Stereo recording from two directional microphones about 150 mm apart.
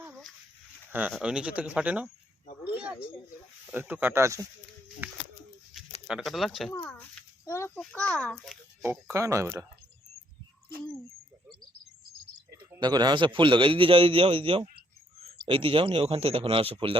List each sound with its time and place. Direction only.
0.0 s dog: centre (ahead or behind)
0.9 s speech: 10° right (ahead or behind)
2.7 s a sound: 10° right (ahead or behind)
3.7 s speech: 10° right (ahead or behind)
5.7 s a sound: centre (ahead or behind)
6.1 s speech: centre (ahead or behind)
6.8 s a sound: 10° left (ahead or behind)
7.8 s a child's voice: 10° left (ahead or behind)
9.1 s speech: 20° right (ahead or behind)
12.8 s a man's voice: 30° right (ahead or behind)